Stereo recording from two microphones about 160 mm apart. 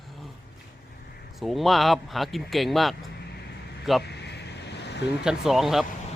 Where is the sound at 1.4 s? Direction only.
Centre (ahead or behind).